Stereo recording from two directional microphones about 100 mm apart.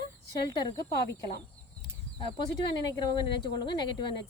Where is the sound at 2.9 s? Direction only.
45° left (ahead or behind).